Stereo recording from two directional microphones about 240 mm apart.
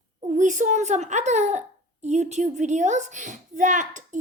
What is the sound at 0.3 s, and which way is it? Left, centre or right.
A child's voice, right.